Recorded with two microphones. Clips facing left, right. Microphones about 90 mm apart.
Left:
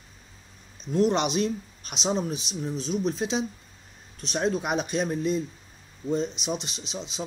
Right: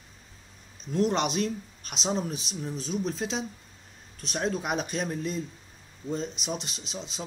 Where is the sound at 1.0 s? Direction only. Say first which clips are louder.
Left 2 dB; 5° left (ahead or behind).